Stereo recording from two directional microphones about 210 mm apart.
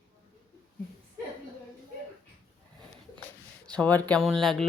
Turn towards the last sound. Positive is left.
turn(degrees=0)  # may be behind; listen again after turning